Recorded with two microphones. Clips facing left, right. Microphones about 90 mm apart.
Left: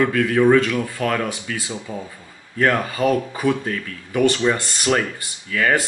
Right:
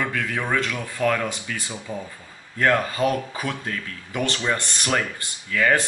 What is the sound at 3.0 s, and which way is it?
Speech, 15° left (ahead or behind).